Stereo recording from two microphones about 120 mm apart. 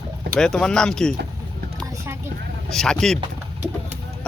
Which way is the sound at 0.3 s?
5° left (ahead or behind).